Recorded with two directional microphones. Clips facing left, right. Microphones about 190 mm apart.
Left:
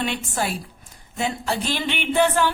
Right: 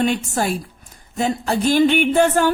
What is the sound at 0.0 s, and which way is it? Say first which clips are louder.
A woman's voice: right 6 dB; 45° right (ahead or behind).